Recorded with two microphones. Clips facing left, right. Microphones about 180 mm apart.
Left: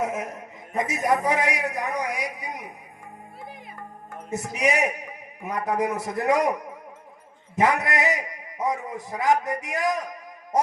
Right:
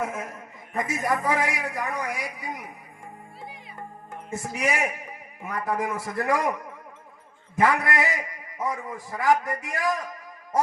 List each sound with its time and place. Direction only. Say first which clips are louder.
0.0 s a man's voice: left 3 dB; 20° left (ahead or behind)
4.3 s a man's voice: left 3 dB; 20° left (ahead or behind)